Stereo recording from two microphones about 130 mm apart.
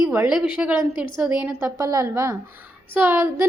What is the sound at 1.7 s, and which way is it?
A woman's voice, 25° right (ahead or behind).